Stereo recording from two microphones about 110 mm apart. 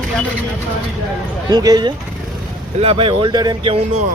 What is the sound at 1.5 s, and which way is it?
Speech, 35° right (ahead or behind).